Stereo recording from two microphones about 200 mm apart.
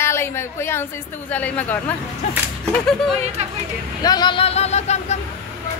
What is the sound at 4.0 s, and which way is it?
Speech, 20° left (ahead or behind).